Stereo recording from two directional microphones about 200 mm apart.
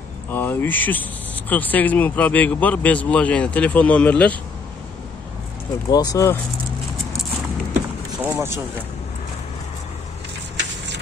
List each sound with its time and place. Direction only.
0.3 s speech: 10° left (ahead or behind)
5.9 s speech: 15° left (ahead or behind)
8.2 s vehicle: 10° right (ahead or behind)